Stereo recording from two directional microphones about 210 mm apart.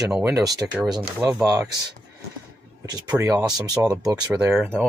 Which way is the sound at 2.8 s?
20° right (ahead or behind).